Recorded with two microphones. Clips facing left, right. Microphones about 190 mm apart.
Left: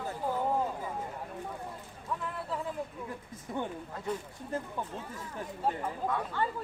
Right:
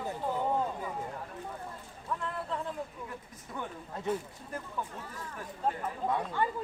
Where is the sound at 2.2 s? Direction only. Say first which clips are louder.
Even; 5° left (ahead or behind).